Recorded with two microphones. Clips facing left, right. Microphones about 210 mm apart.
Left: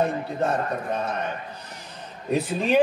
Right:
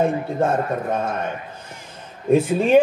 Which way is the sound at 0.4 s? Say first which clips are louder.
Right 4 dB; 50° right (ahead or behind).